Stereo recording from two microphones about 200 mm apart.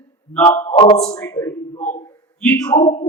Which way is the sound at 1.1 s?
10° left (ahead or behind).